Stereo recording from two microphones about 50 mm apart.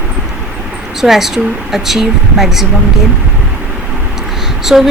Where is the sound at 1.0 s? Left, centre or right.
Centre.